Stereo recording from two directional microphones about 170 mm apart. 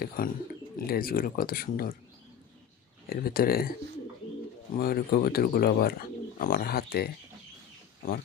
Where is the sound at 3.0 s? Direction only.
60° left (ahead or behind).